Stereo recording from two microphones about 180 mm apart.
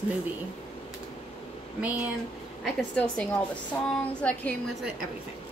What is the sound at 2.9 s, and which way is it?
A woman's voice, 5° left (ahead or behind).